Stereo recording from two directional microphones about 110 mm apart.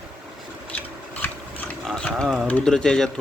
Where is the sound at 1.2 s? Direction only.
15° left (ahead or behind).